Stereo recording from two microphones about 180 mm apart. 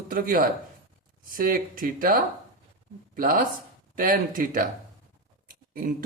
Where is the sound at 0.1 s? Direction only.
50° right (ahead or behind).